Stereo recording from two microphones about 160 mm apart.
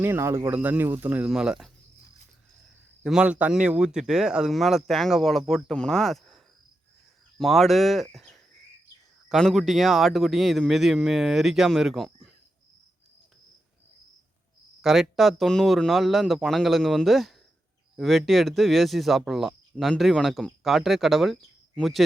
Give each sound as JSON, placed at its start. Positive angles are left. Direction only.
{"t": 0.0, "sound": "speech", "side_deg": -15}
{"t": 3.0, "sound": "speech", "side_deg": -5}
{"t": 8.1, "sound": "cricket", "side_deg": 0}
{"t": 9.3, "sound": "speech", "side_deg": 0}
{"t": 14.8, "sound": "speech", "side_deg": 0}